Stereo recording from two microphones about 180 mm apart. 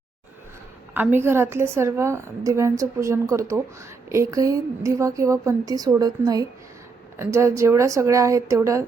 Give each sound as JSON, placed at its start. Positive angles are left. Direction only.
{"t": 0.9, "sound": "a woman's voice", "side_deg": -10}